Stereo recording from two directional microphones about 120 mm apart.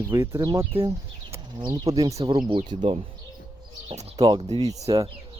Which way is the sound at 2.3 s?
40° right (ahead or behind).